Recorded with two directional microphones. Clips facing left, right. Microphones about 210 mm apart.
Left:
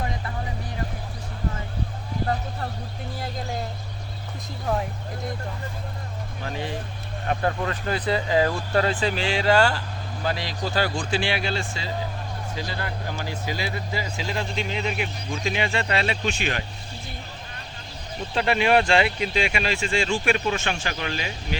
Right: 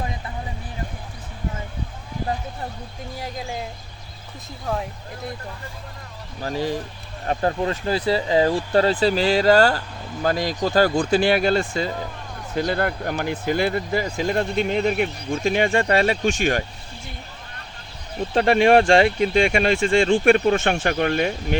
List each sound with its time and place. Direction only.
4.6 s speech: centre (ahead or behind)
6.4 s speech: 40° right (ahead or behind)
18.3 s speech: 45° right (ahead or behind)